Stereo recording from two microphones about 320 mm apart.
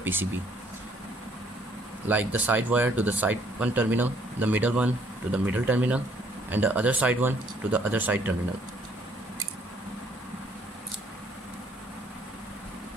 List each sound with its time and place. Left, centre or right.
0.0 s speech: centre
2.0 s speech: centre